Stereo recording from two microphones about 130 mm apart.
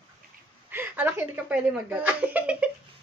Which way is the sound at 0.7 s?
15° right (ahead or behind).